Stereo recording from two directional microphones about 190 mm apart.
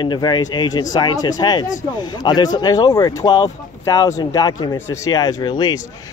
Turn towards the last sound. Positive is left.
turn(degrees=20)  # may be behind; listen again after turning